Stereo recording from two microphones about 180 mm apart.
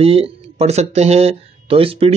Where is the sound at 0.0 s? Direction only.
35° right (ahead or behind).